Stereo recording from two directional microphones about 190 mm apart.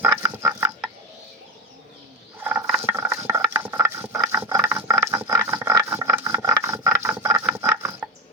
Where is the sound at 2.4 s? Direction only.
10° right (ahead or behind).